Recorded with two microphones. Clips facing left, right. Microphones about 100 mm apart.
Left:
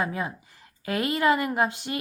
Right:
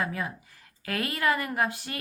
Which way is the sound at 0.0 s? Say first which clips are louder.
Left 3 dB; 25° left (ahead or behind).